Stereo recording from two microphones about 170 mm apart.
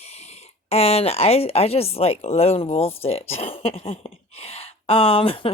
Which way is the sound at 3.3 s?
35° left (ahead or behind).